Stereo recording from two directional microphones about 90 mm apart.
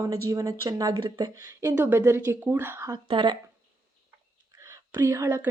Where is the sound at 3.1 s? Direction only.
55° right (ahead or behind).